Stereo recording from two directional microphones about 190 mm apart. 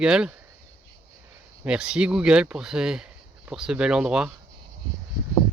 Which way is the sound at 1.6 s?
5° right (ahead or behind).